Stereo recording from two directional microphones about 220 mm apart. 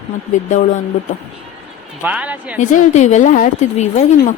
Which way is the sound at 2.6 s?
35° left (ahead or behind).